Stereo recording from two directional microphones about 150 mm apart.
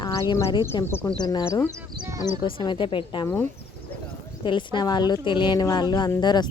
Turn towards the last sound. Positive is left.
turn(degrees=30)  # may be behind; listen again after turning